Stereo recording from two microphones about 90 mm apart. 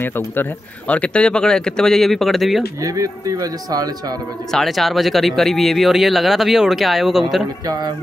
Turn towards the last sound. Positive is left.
turn(degrees=-50)  # may be behind; listen again after turning